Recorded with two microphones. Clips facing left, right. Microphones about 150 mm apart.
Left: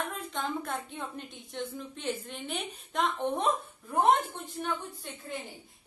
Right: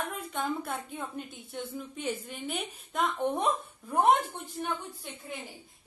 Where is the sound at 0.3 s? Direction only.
10° right (ahead or behind).